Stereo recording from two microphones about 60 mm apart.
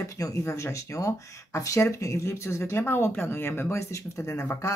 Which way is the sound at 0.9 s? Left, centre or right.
Left.